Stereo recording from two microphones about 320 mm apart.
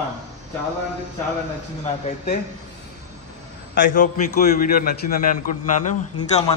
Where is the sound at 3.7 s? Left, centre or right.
Left.